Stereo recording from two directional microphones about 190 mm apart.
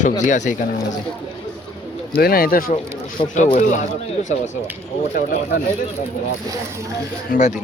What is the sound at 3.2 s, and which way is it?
Speech, 35° left (ahead or behind).